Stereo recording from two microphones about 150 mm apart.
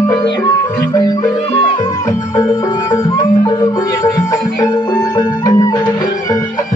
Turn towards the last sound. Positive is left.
turn(degrees=25)  # may be behind; listen again after turning